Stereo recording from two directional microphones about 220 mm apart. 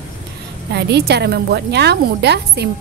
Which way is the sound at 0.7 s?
50° right (ahead or behind).